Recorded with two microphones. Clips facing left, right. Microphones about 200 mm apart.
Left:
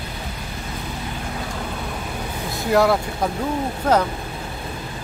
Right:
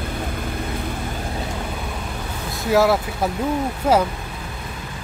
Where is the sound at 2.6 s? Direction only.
Centre (ahead or behind).